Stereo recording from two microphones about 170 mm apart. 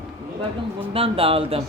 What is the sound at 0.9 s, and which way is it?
Speech, 35° right (ahead or behind).